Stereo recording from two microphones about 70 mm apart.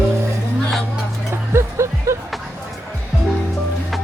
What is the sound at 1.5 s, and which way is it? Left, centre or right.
Music, right.